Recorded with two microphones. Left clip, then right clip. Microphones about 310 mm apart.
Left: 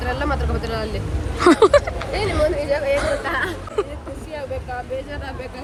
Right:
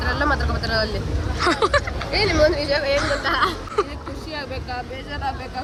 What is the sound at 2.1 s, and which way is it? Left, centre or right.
Speech, right.